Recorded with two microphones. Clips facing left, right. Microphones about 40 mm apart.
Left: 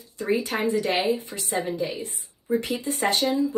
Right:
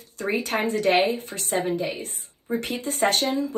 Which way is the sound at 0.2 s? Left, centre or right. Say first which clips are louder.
Even; right.